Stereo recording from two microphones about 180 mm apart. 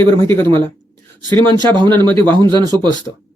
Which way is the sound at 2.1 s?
10° left (ahead or behind).